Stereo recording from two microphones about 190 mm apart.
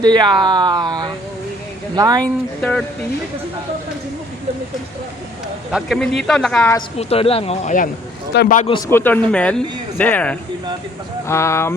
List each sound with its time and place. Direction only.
0.0 s speech: 20° right (ahead or behind)
2.2 s speech: 5° left (ahead or behind)
5.7 s speech: centre (ahead or behind)
6.7 s speech: 30° left (ahead or behind)
8.3 s speech: 60° left (ahead or behind)
8.9 s speech: 10° left (ahead or behind)